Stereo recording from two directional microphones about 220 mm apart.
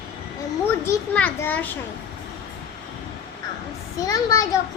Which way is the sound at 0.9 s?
10° left (ahead or behind).